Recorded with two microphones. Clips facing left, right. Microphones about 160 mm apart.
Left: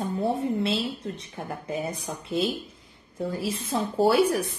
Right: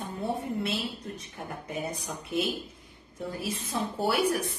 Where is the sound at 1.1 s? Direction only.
25° left (ahead or behind).